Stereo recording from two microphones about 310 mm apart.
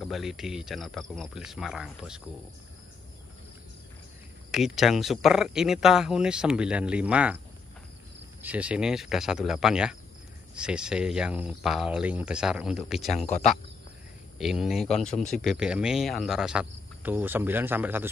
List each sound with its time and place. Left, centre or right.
0.0 s speech: centre
4.5 s speech: centre
8.4 s speech: centre
14.4 s speech: centre
14.9 s speech: left
15.1 s speech: centre